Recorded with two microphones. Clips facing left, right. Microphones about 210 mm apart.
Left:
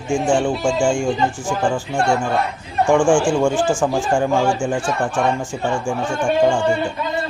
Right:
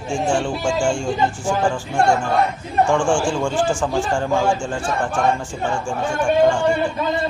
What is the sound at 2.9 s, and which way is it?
Speech, 15° left (ahead or behind).